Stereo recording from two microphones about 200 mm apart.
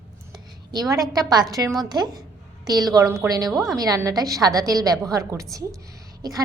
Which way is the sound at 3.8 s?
15° right (ahead or behind).